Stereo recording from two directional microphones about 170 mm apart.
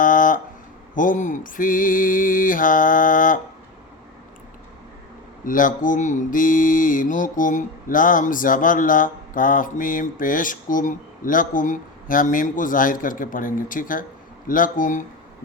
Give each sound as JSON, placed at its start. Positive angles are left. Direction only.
{"t": 0.0, "sound": "a sound", "side_deg": 50}
{"t": 0.9, "sound": "mantra", "side_deg": 50}
{"t": 5.5, "sound": "mantra", "side_deg": 50}